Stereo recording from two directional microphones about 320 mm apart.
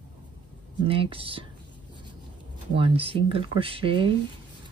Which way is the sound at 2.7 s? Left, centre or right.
Centre.